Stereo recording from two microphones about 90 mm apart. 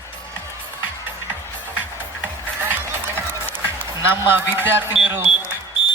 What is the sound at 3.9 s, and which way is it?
A man's voice, 25° right (ahead or behind).